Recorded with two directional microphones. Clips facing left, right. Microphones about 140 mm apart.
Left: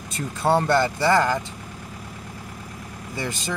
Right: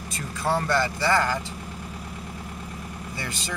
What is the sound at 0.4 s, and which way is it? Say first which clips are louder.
Speech: left 5 dB; 25° left (ahead or behind).